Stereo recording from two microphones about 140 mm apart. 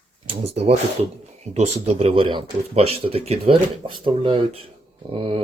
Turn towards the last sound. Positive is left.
turn(degrees=-40)  # may be behind; listen again after turning